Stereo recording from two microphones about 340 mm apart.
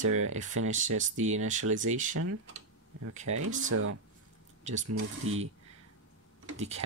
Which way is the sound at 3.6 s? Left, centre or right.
Right.